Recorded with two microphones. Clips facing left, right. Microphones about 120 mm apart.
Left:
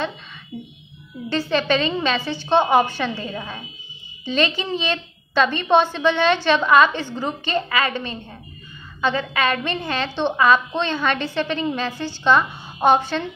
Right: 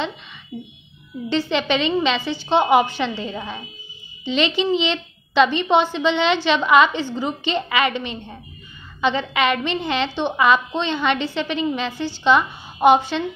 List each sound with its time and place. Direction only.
0.5 s speech: 5° right (ahead or behind)
1.5 s a woman's voice: 15° right (ahead or behind)